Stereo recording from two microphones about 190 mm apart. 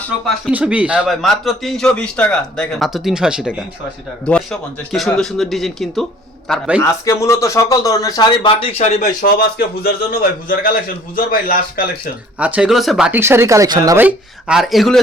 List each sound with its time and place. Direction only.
0.5 s a man's voice: 5° right (ahead or behind)
4.3 s a man's voice: 5° left (ahead or behind)
7.0 s speech: 15° left (ahead or behind); by 9.0 s 35° left (ahead or behind)
9.2 s a man's voice: 55° left (ahead or behind)
12.4 s a man's voice: 5° right (ahead or behind)